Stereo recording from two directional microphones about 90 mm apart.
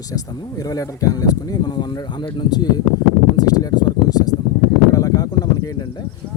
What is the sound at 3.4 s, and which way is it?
Speech, 45° left (ahead or behind).